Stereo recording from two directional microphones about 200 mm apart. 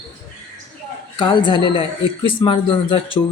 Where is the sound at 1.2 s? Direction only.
25° left (ahead or behind).